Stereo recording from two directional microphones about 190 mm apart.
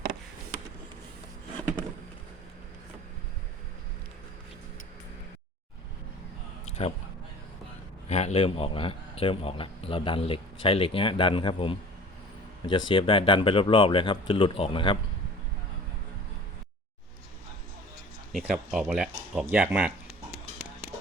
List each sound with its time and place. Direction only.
6.7 s a sound: 35° left (ahead or behind)
8.0 s a man's voice: 35° left (ahead or behind)
18.3 s speech: 5° right (ahead or behind)